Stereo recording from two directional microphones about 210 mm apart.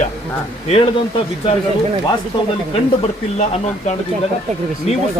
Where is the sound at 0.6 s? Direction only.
30° left (ahead or behind).